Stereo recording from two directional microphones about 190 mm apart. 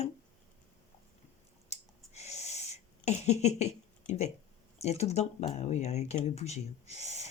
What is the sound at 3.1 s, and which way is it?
Speech, 35° left (ahead or behind).